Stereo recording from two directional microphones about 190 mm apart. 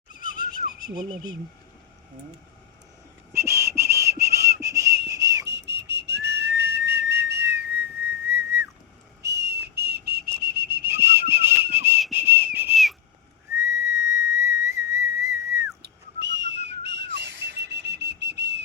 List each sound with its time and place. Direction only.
0.1 s a sound: 45° left (ahead or behind)
0.9 s speech: 20° right (ahead or behind)
3.3 s whistling: 15° right (ahead or behind)
5.0 s whistle: 20° right (ahead or behind)
5.5 s whistling: 65° right (ahead or behind)
6.6 s whistle: 60° right (ahead or behind)
7.4 s whistling: 10° right (ahead or behind)
9.2 s whistling: 60° right (ahead or behind)
10.9 s whistle: 10° right (ahead or behind)
12.7 s whistle: centre (ahead or behind)
13.6 s whistle: 15° right (ahead or behind)
15.8 s whistle: 65° right (ahead or behind)